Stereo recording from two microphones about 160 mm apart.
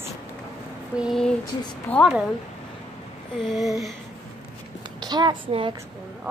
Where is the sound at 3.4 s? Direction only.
Centre (ahead or behind).